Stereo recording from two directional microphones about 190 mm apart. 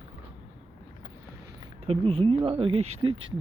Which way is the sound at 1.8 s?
30° right (ahead or behind).